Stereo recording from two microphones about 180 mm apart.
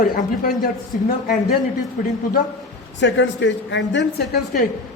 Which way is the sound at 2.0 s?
50° left (ahead or behind).